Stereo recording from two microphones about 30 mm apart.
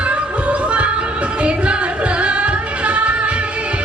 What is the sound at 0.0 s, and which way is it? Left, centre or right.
Music, right.